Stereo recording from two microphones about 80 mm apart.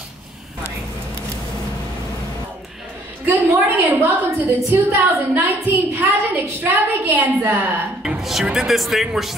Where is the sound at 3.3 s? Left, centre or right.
Right.